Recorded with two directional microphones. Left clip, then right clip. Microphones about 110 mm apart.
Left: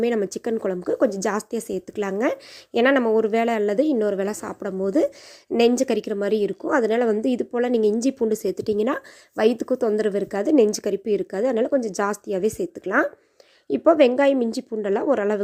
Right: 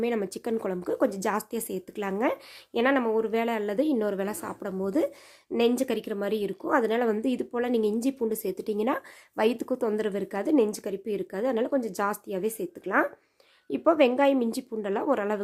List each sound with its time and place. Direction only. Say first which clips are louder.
0.0 s a woman's voice: left 6 dB; 35° left (ahead or behind)
0.5 s a woman's voice: left 4 dB; 20° left (ahead or behind)
2.7 s a woman's voice: left 6 dB; 50° left (ahead or behind); by 5.5 s 35° left (ahead or behind)
5.5 s a woman's voice: left 6 dB; 45° left (ahead or behind); by 15.4 s 30° left (ahead or behind)